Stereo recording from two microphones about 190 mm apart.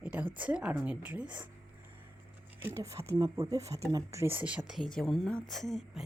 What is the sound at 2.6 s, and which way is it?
Speech, 15° right (ahead or behind).